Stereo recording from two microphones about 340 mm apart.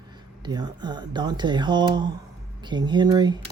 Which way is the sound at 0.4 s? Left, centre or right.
Centre.